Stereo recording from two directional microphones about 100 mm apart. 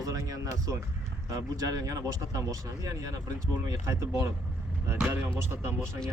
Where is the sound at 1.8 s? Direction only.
35° right (ahead or behind).